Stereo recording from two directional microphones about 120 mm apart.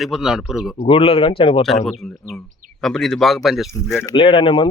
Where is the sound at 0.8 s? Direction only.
50° left (ahead or behind).